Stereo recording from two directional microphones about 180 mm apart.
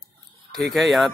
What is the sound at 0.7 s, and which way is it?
Speech, centre (ahead or behind).